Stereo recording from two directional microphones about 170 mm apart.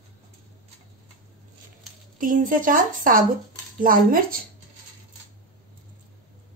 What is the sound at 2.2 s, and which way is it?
A woman's voice, 50° right (ahead or behind).